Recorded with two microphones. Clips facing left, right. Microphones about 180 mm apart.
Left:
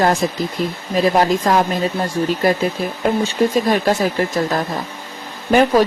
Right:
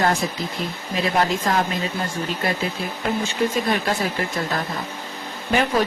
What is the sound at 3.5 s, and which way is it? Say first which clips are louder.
Speech: left 6 dB; 40° left (ahead or behind).